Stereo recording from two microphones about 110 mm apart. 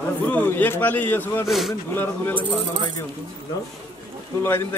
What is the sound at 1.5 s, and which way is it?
Speech, centre (ahead or behind).